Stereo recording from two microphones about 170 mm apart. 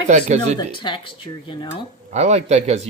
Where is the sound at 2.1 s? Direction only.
40° right (ahead or behind).